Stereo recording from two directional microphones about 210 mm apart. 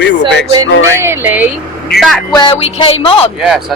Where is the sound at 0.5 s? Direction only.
15° right (ahead or behind); by 2.2 s centre (ahead or behind).